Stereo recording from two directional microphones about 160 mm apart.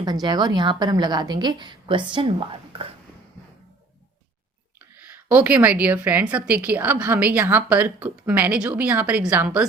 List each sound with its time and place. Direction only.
0.0 s a woman's voice: 25° right (ahead or behind)
5.3 s a woman's voice: 10° right (ahead or behind)